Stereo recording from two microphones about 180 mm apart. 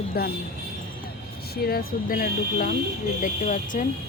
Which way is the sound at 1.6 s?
55° left (ahead or behind).